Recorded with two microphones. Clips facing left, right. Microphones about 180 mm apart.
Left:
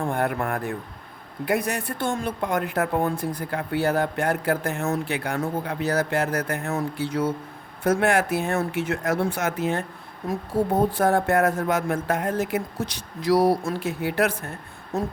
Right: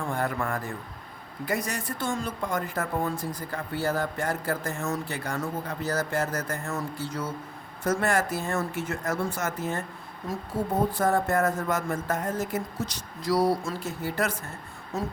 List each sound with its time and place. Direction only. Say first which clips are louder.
0.0 s speech: left 4 dB; 60° left (ahead or behind)
10.9 s speech: left 4 dB; 65° left (ahead or behind)